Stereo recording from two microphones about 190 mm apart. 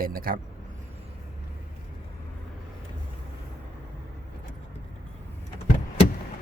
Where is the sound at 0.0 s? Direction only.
50° right (ahead or behind).